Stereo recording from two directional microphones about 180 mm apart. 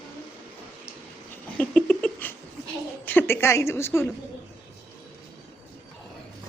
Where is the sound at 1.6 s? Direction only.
5° left (ahead or behind).